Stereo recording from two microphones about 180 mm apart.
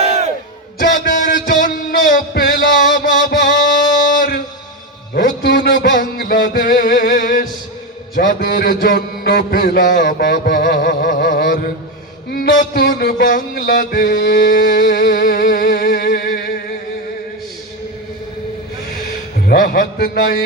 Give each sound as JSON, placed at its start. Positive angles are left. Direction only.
{"t": 0.0, "sound": "crowd", "side_deg": -35}
{"t": 0.8, "sound": "a sound", "side_deg": 50}
{"t": 1.5, "sound": "music", "side_deg": 50}
{"t": 5.1, "sound": "a sound", "side_deg": 60}
{"t": 12.3, "sound": "music", "side_deg": 55}
{"t": 19.5, "sound": "music", "side_deg": 60}